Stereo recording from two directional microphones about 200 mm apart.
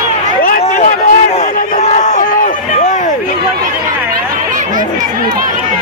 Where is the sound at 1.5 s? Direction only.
40° left (ahead or behind).